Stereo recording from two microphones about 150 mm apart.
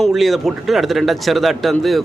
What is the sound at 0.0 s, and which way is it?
A man's voice, centre (ahead or behind).